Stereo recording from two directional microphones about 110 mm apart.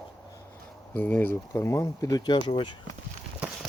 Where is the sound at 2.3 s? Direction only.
50° left (ahead or behind).